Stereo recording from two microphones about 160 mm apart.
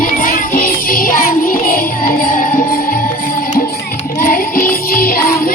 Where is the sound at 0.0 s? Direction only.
60° left (ahead or behind).